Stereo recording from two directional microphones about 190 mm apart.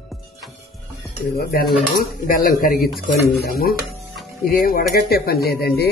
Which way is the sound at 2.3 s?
50° left (ahead or behind).